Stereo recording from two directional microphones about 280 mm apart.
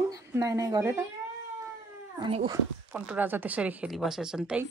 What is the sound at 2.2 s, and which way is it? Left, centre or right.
Speech, centre.